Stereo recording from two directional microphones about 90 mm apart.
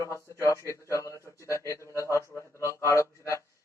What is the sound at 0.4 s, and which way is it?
A man's voice, 35° left (ahead or behind).